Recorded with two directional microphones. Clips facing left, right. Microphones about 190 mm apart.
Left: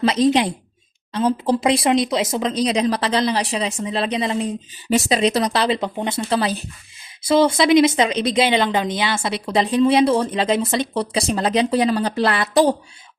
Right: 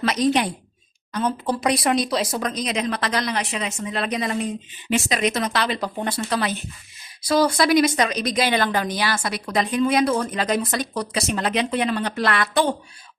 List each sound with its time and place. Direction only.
0.0 s speech: 25° left (ahead or behind)